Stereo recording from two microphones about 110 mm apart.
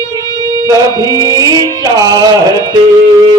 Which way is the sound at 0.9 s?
35° left (ahead or behind).